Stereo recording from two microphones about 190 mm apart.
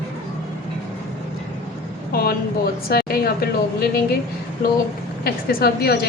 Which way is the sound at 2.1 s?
55° left (ahead or behind).